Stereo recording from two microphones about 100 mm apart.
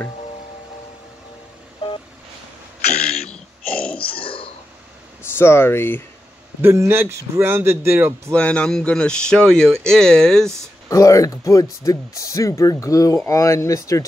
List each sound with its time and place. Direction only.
3.3 s a sound: 10° left (ahead or behind)
4.0 s burping: 65° left (ahead or behind)
5.3 s speech: 25° left (ahead or behind)
6.6 s a man's voice: 25° right (ahead or behind)
8.3 s speech: 10° left (ahead or behind)
10.9 s speech: 35° left (ahead or behind)